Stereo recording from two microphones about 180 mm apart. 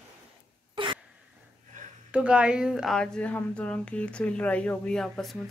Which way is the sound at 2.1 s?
5° right (ahead or behind).